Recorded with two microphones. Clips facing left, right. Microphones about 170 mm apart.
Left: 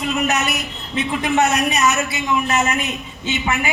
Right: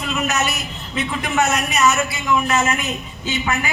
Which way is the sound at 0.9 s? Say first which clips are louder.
Left 3 dB; 30° left (ahead or behind).